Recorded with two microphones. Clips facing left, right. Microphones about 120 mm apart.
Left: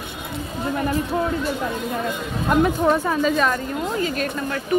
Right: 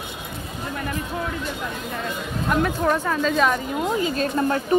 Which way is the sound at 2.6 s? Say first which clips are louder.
Left 4 dB; 15° left (ahead or behind).